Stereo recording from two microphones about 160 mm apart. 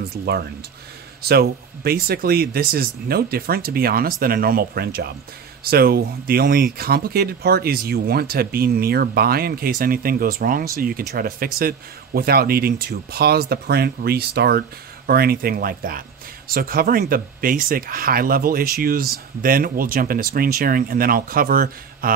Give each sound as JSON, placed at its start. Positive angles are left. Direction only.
{"t": 0.0, "sound": "speech", "side_deg": -80}
{"t": 15.0, "sound": "speech", "side_deg": -70}